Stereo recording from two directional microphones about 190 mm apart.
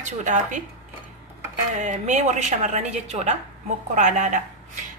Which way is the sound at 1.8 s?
40° right (ahead or behind).